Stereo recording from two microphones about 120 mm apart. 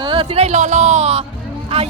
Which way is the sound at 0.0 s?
45° right (ahead or behind).